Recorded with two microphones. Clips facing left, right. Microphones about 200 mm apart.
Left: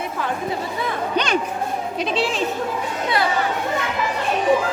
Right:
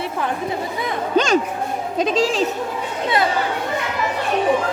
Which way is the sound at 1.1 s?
45° right (ahead or behind).